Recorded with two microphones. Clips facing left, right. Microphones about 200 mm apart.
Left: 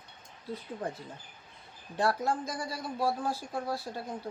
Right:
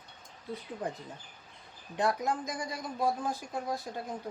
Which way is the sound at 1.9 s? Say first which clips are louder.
Left 1 dB; 15° right (ahead or behind).